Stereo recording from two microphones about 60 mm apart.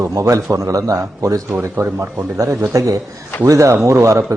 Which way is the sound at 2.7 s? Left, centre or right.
Right.